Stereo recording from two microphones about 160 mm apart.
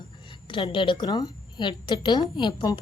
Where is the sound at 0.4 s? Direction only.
30° left (ahead or behind).